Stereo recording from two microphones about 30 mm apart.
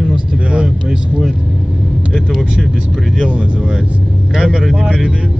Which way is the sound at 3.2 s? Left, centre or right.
Right.